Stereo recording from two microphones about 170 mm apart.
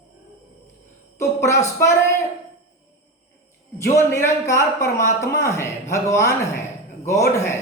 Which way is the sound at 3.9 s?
15° left (ahead or behind).